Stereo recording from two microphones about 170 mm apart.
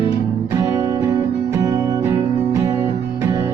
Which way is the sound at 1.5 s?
20° right (ahead or behind).